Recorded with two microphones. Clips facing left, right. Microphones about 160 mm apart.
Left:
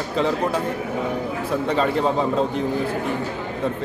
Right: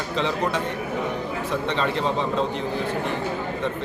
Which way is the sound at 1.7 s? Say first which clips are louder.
Left 5 dB; 45° left (ahead or behind).